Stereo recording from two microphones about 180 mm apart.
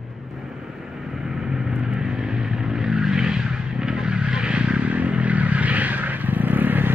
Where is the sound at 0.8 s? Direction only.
5° right (ahead or behind).